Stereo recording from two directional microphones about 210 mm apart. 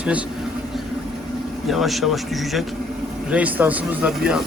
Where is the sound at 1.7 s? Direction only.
Centre (ahead or behind).